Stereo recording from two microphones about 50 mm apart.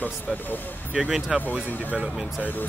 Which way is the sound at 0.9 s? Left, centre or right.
Centre.